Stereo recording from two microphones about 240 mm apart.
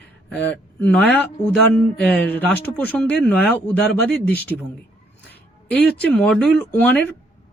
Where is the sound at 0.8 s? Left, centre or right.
Centre.